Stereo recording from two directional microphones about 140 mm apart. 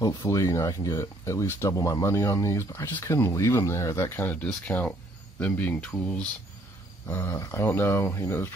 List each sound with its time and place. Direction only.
0.0 s speech: 25° left (ahead or behind)